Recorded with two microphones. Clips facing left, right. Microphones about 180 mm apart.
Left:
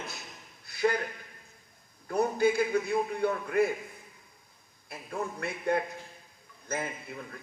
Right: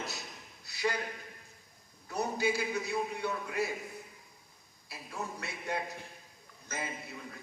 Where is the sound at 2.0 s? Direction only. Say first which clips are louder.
Left 6 dB; 50° left (ahead or behind).